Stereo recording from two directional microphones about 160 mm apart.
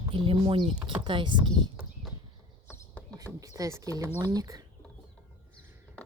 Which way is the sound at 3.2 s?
20° right (ahead or behind).